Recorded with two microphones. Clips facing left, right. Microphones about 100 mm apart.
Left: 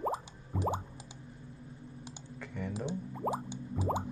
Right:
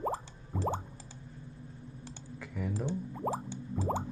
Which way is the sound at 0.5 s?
Centre (ahead or behind).